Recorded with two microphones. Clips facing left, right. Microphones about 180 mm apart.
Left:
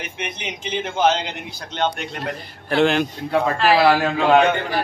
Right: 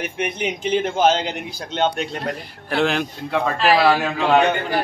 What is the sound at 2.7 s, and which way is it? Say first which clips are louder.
A man's voice: left 3 dB; centre (ahead or behind).